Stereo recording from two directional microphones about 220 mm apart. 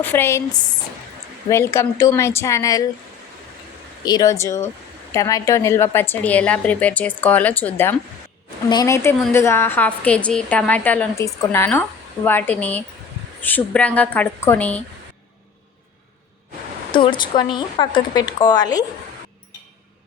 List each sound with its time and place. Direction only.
0.0 s a woman's voice: 10° left (ahead or behind)
4.0 s a woman's voice: 20° left (ahead or behind)
16.9 s speech: 20° left (ahead or behind)